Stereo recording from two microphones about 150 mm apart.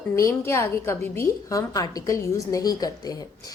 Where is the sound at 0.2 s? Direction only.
20° left (ahead or behind).